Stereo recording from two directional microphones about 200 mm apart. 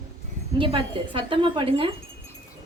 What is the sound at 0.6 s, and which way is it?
A woman's voice, 25° right (ahead or behind).